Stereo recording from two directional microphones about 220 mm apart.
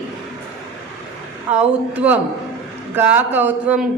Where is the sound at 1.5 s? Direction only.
5° right (ahead or behind).